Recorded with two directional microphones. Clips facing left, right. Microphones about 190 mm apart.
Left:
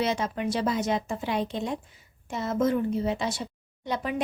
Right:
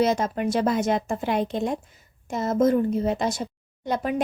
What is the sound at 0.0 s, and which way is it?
A woman's voice, 45° right (ahead or behind).